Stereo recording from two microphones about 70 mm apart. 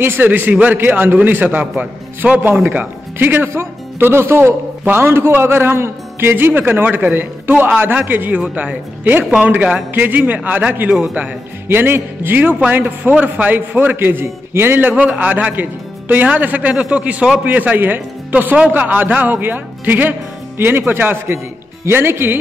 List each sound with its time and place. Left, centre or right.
0.0 s speech: right
10.9 s a man's voice: centre
11.6 s speech: right